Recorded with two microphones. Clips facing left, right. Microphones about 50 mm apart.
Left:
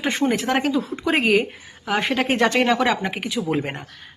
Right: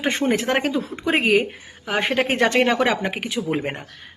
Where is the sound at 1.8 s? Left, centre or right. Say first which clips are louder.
Even; right.